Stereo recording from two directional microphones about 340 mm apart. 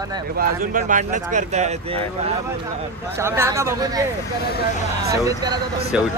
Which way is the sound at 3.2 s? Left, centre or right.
Centre.